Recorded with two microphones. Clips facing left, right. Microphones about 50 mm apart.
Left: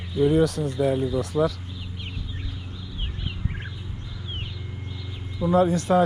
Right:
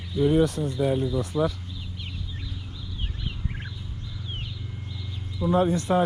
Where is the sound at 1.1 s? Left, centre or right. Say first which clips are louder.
Left 2 dB; left.